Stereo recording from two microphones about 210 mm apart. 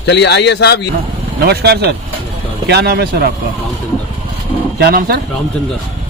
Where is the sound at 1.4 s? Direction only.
50° right (ahead or behind).